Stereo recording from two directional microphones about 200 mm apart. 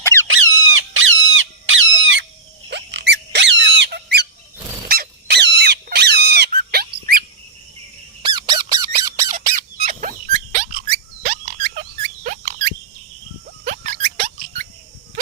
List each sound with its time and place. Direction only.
0.0 s squeak: 15° left (ahead or behind)
0.3 s squawk: 80° right
2.6 s squeak: 60° right (ahead or behind)
4.9 s a sound: 55° right (ahead or behind)
8.2 s squeak: 20° right (ahead or behind)
9.8 s turkey: 40° right (ahead or behind)
11.2 s frog: 45° right (ahead or behind)
12.2 s rodents: 45° right (ahead or behind)
13.7 s a sound: 45° right (ahead or behind)